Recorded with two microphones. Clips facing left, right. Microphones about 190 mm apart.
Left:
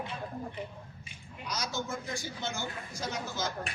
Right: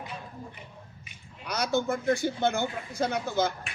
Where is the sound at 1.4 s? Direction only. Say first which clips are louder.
Right 9 dB; 60° right (ahead or behind).